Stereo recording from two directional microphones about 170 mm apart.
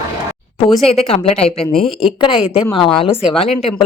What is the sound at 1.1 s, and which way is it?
A woman's voice, 35° left (ahead or behind).